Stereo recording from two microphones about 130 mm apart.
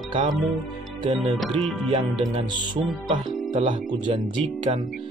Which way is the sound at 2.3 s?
35° right (ahead or behind).